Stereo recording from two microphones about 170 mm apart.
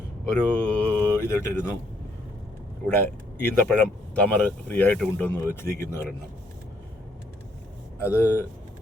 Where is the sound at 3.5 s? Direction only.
10° left (ahead or behind).